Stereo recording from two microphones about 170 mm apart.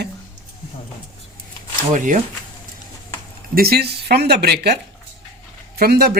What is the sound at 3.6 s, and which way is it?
A man's voice, 65° right (ahead or behind).